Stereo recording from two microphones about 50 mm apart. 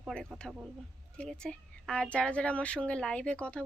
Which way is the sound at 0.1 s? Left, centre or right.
Centre.